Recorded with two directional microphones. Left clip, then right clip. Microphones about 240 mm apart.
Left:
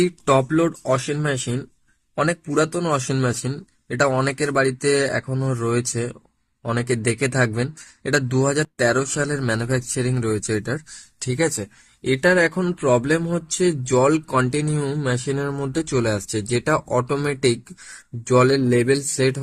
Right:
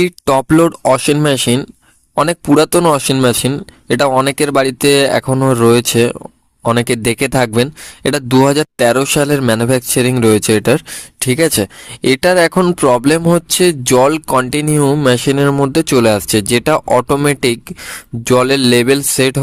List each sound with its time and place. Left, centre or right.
0.0 s speech: right
18.5 s speech: right
18.9 s speech: right